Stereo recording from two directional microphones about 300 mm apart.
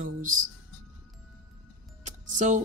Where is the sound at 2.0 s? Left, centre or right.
Right.